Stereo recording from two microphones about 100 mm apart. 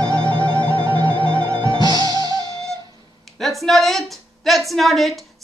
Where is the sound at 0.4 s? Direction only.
60° right (ahead or behind).